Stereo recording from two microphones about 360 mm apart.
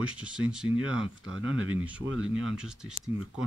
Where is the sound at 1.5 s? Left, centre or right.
Right.